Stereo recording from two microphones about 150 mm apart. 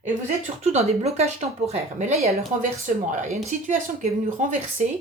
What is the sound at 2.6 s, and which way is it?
Speech, 60° right (ahead or behind).